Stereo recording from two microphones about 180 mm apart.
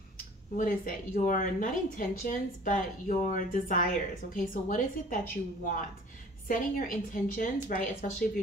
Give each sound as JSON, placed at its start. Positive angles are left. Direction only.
{"t": 0.6, "sound": "speech", "side_deg": 50}